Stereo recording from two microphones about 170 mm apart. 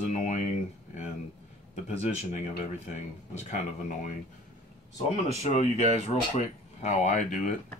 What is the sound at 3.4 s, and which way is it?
Speech, 45° left (ahead or behind).